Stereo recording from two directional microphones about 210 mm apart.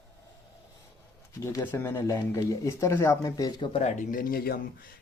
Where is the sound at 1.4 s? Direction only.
15° left (ahead or behind).